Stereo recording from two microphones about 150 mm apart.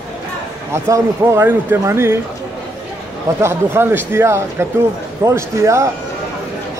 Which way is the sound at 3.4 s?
15° right (ahead or behind).